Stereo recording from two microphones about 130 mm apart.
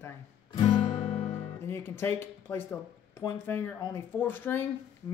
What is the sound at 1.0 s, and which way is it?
Music, 50° left (ahead or behind).